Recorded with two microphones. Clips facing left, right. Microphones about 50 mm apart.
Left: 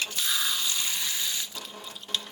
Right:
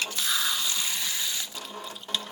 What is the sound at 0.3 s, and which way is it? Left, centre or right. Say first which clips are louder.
Water: right 2 dB; centre.